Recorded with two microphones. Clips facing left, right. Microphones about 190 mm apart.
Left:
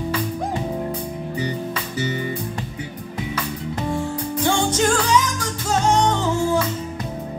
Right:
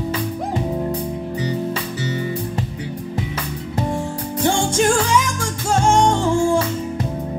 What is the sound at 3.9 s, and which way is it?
Music, 25° right (ahead or behind).